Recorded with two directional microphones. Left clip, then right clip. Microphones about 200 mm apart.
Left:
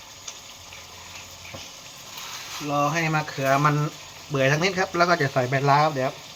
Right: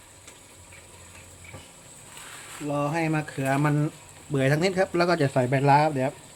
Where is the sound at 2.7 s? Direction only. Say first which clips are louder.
Left 4 dB; 50° right (ahead or behind).